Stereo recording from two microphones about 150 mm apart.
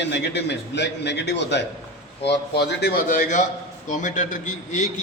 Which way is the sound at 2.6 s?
75° left (ahead or behind).